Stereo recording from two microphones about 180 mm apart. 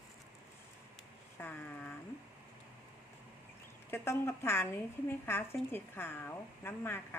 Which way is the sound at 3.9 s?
15° left (ahead or behind).